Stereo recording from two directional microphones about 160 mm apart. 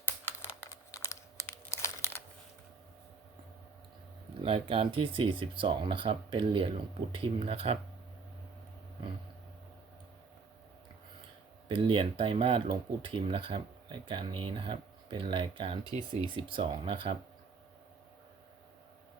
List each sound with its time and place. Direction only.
0.0 s computer keyboard: 15° left (ahead or behind)
4.4 s speech: 35° right (ahead or behind)
11.7 s speech: 35° right (ahead or behind)
15.8 s speech: 25° left (ahead or behind)
16.3 s speech: 30° right (ahead or behind)